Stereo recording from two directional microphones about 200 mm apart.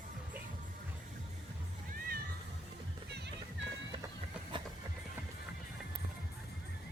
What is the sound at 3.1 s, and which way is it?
Music, 55° right (ahead or behind).